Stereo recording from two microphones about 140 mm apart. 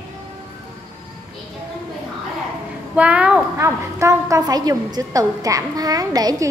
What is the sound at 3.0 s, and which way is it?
A woman's voice, 10° right (ahead or behind).